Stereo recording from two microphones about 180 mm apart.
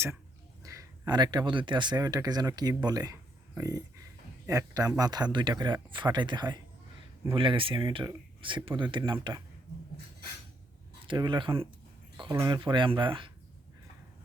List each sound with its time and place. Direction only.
0.6 s speech: 20° right (ahead or behind)
11.0 s speech: 25° right (ahead or behind)